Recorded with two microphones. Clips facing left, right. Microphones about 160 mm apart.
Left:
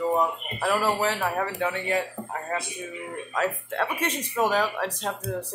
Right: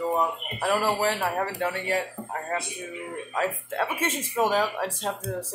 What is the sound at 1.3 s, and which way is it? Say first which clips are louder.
Speech: even; 15° left (ahead or behind).